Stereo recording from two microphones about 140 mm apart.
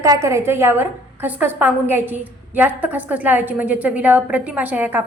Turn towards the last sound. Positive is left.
turn(degrees=-10)  # may be behind; listen again after turning